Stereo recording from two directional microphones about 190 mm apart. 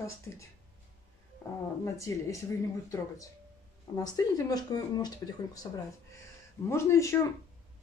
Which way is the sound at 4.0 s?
20° left (ahead or behind).